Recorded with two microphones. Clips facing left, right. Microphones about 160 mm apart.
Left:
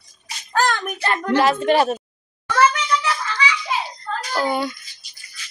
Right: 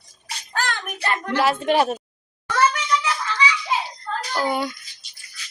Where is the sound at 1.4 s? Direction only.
10° right (ahead or behind).